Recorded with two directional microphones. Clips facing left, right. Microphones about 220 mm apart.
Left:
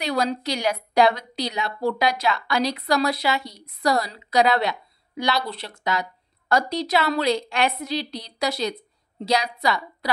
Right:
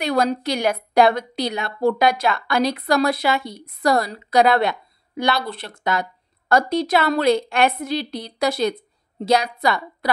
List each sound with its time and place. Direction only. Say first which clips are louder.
0.0 s a woman's voice: right 4 dB; 50° right (ahead or behind)